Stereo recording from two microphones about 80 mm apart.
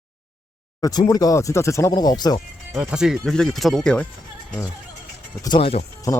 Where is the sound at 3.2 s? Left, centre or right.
Centre.